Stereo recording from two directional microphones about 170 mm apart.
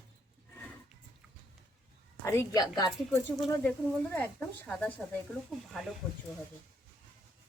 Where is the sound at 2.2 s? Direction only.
15° left (ahead or behind).